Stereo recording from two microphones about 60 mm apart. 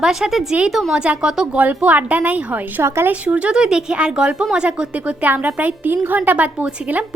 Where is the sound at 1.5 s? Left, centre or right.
Right.